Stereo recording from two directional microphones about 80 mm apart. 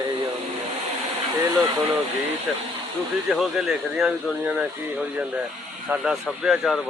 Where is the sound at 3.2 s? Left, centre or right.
Centre.